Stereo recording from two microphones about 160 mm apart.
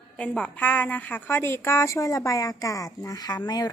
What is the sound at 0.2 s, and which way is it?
A woman's voice, 10° left (ahead or behind).